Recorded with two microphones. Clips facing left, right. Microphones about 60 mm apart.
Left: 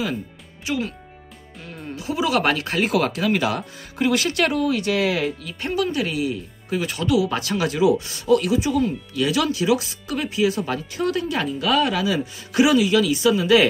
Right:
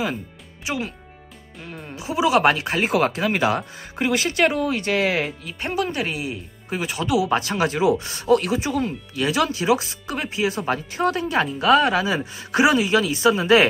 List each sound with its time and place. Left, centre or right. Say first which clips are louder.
0.7 s speech: left 2 dB; centre
2.9 s speech: even; right
5.4 s speech: left 1 dB; centre
7.3 s speech: right 1 dB; right